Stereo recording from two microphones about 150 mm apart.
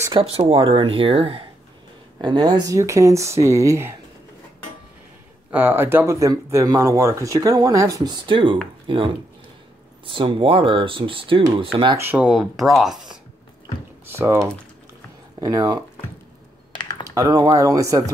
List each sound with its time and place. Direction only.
0.1 s speech: 35° right (ahead or behind); by 3.9 s 20° right (ahead or behind)
5.5 s speech: 15° right (ahead or behind); by 11.4 s 35° right (ahead or behind)
12.0 s speech: 10° right (ahead or behind)
14.0 s speech: 15° right (ahead or behind)
15.4 s speech: 25° right (ahead or behind)
17.1 s speech: 25° right (ahead or behind)